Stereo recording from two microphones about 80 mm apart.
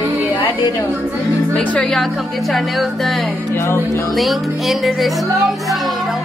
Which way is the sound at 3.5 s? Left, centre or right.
Left.